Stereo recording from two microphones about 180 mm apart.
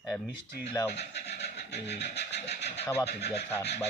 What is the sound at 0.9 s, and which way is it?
Speech, 70° left (ahead or behind).